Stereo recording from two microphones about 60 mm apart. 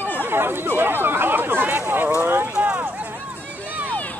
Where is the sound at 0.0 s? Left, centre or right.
Left.